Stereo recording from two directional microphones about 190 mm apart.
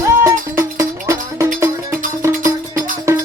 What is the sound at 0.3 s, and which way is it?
Music, 15° right (ahead or behind).